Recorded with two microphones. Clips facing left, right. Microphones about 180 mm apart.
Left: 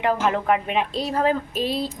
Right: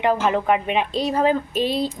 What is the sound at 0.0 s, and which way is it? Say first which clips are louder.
A woman's voice: right 2 dB; centre (ahead or behind).